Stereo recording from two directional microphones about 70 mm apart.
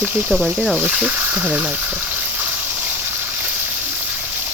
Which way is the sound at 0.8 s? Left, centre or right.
Right.